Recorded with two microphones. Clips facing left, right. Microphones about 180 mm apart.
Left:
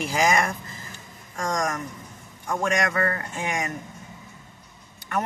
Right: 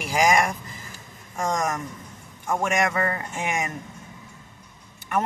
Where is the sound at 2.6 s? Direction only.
20° right (ahead or behind).